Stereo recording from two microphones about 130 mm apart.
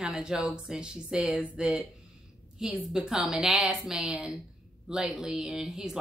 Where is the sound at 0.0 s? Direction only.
5° right (ahead or behind).